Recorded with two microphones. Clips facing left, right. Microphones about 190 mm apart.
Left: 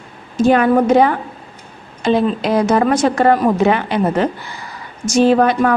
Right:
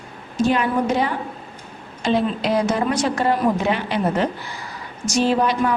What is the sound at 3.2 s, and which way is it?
Speech, 65° left (ahead or behind).